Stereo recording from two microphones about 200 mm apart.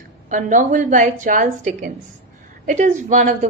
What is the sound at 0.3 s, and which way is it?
A woman's voice, 40° right (ahead or behind).